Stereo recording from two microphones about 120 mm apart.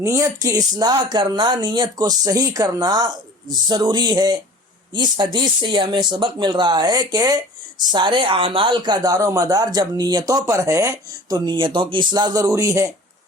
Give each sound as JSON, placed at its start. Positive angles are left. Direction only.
{"t": 0.0, "sound": "speech", "side_deg": -25}